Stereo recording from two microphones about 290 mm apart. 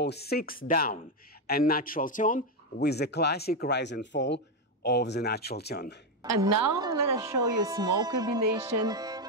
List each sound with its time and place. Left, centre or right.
0.0 s a man's voice: left
6.4 s speech: centre
8.7 s music: centre